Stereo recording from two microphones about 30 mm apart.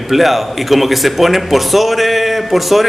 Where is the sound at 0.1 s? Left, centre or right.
Centre.